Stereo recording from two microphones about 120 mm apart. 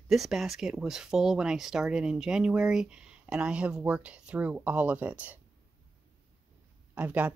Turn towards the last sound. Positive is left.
turn(degrees=-15)  # may be behind; listen again after turning